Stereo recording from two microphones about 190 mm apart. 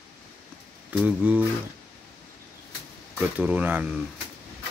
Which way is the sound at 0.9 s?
10° right (ahead or behind).